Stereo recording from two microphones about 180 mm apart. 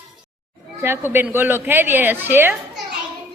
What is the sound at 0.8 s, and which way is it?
A woman's voice, 10° right (ahead or behind).